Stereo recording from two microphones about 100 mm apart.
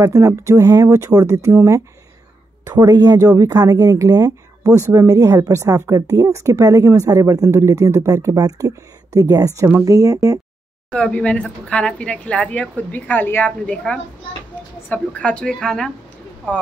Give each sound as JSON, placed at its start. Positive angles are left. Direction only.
{"t": 0.0, "sound": "speech", "side_deg": -30}
{"t": 2.6, "sound": "speech", "side_deg": -35}
{"t": 10.9, "sound": "speech", "side_deg": 10}